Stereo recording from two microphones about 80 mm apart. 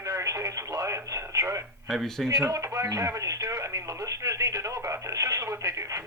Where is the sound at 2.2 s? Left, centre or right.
Right.